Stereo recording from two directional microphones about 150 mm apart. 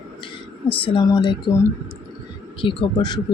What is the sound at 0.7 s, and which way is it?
Speech, 30° left (ahead or behind).